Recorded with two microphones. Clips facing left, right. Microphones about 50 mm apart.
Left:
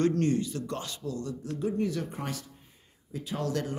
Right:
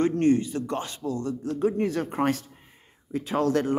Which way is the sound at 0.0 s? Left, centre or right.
Right.